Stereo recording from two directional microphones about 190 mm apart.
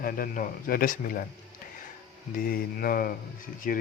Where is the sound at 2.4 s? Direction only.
50° left (ahead or behind).